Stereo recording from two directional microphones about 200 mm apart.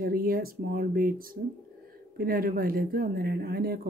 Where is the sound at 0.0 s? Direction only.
45° right (ahead or behind).